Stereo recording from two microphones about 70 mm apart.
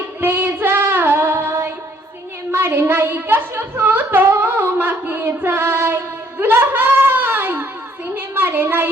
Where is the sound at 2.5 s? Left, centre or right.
Right.